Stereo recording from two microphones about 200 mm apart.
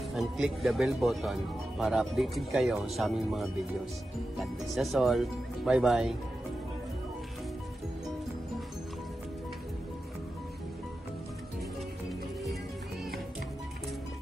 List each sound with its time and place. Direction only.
0.1 s speech: centre (ahead or behind)